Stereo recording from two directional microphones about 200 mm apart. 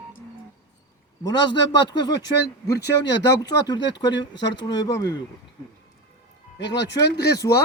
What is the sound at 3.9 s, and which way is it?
Speech, 65° left (ahead or behind).